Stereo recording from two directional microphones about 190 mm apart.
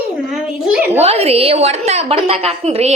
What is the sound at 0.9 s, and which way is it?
A woman's voice, 35° right (ahead or behind).